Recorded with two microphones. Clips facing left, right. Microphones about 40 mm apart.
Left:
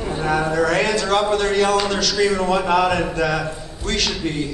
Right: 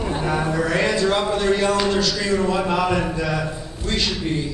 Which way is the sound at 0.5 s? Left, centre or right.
Left.